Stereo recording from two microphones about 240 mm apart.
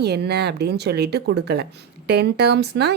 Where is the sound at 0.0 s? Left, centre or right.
Right.